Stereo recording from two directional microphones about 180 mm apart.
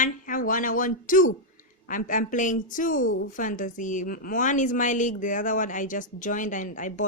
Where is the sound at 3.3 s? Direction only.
45° left (ahead or behind).